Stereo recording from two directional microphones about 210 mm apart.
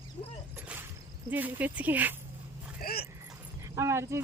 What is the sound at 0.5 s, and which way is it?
Whip, 10° right (ahead or behind).